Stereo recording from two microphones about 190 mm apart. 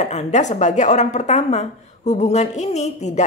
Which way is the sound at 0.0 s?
35° left (ahead or behind).